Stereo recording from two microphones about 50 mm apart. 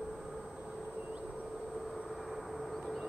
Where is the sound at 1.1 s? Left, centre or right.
Right.